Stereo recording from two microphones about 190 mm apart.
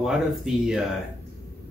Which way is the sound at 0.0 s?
Centre (ahead or behind).